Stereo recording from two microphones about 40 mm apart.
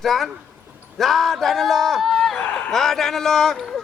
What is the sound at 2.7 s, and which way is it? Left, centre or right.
A man's voice, centre.